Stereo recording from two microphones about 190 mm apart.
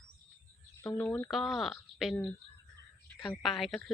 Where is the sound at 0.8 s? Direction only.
10° left (ahead or behind).